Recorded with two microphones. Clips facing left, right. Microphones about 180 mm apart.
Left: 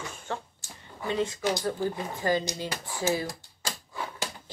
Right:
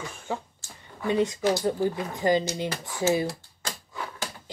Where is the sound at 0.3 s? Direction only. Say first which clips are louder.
Right 4 dB; 10° right (ahead or behind).